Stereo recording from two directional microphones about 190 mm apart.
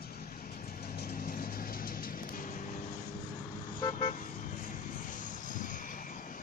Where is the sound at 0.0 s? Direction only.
50° left (ahead or behind).